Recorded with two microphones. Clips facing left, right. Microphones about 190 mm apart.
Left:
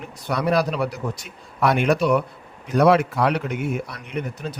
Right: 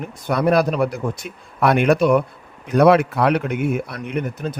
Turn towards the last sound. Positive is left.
turn(degrees=-50)  # may be behind; listen again after turning